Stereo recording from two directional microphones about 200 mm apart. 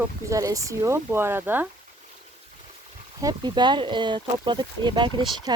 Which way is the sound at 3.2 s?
20° right (ahead or behind).